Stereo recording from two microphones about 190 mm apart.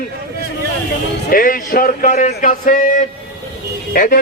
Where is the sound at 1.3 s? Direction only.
45° left (ahead or behind).